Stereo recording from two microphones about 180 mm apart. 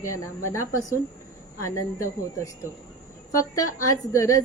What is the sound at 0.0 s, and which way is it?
Speech, 15° left (ahead or behind).